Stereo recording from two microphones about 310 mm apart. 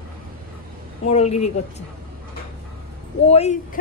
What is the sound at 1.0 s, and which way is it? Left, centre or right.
Speech, left.